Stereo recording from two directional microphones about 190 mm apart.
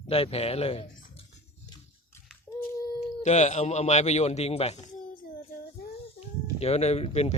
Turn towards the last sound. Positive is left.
turn(degrees=35)  # may be behind; listen again after turning